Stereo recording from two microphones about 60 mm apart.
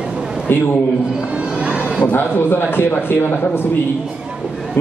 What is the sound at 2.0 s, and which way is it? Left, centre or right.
A man's voice, left.